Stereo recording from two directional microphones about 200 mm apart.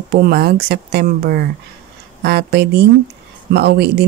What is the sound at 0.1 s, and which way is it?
Speech, 50° right (ahead or behind).